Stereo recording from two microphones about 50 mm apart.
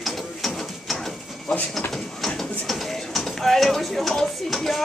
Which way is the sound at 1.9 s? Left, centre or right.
Centre.